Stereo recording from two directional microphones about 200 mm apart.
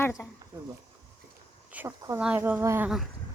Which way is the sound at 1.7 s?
10° right (ahead or behind).